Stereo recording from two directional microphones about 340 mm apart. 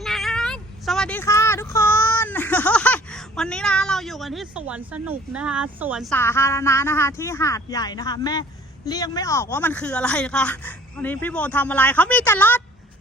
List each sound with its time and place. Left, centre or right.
0.0 s speech: centre